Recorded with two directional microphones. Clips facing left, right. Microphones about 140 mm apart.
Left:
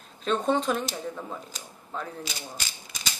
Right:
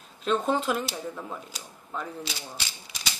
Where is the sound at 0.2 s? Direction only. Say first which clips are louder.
Even; 5° right (ahead or behind).